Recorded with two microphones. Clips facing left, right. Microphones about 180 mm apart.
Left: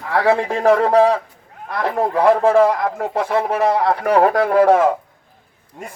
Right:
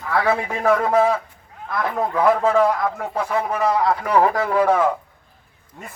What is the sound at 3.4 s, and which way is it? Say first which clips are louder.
A man's voice: left 3 dB; 65° left (ahead or behind).